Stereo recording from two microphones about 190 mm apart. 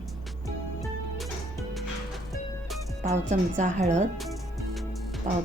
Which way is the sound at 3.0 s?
40° right (ahead or behind).